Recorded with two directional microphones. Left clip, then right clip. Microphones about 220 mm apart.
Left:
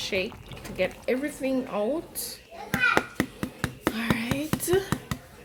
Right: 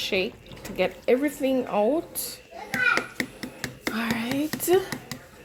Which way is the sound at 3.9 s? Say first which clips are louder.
Right 1 dB; 15° right (ahead or behind).